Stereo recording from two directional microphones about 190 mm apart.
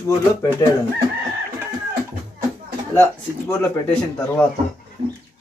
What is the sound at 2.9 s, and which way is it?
A man's voice, 10° left (ahead or behind).